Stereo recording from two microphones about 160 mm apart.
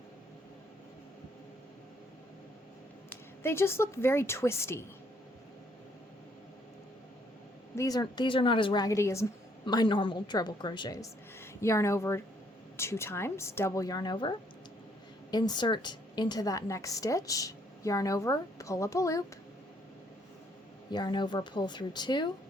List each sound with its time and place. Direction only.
3.1 s a woman's voice: 15° left (ahead or behind)
7.8 s a woman's voice: 25° left (ahead or behind)
20.9 s a woman's voice: 30° left (ahead or behind)